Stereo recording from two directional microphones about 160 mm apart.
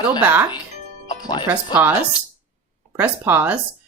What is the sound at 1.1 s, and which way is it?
Music, 25° left (ahead or behind).